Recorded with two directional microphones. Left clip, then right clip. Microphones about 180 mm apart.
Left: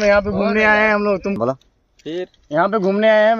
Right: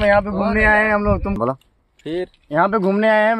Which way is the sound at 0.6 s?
45° left (ahead or behind).